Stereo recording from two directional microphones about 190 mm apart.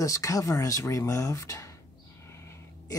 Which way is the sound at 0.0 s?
15° left (ahead or behind).